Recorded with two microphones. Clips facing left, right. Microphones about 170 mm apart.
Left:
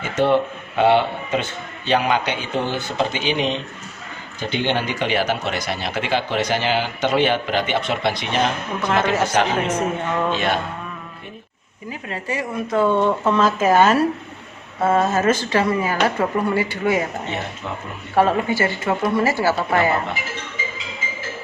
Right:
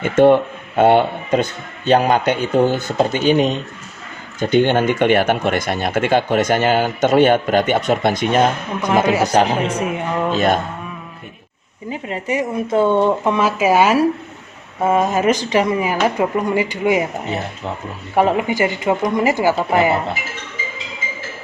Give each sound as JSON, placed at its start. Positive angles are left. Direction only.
{"t": 0.0, "sound": "speech", "side_deg": -50}
{"t": 8.8, "sound": "speech", "side_deg": -15}
{"t": 9.3, "sound": "speech", "side_deg": -35}
{"t": 9.7, "sound": "speech", "side_deg": -10}
{"t": 10.3, "sound": "speech", "side_deg": -40}
{"t": 11.9, "sound": "speech", "side_deg": -20}
{"t": 18.1, "sound": "speech", "side_deg": -15}